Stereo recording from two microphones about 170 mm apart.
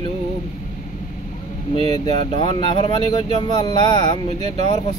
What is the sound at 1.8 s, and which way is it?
Speech, 30° left (ahead or behind).